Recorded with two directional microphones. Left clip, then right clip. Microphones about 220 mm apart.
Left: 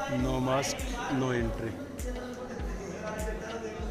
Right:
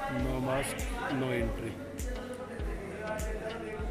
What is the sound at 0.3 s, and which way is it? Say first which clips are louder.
Speech: left 4 dB; 10° left (ahead or behind).